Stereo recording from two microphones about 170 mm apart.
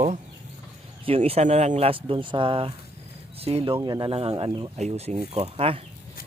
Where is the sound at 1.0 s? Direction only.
35° right (ahead or behind).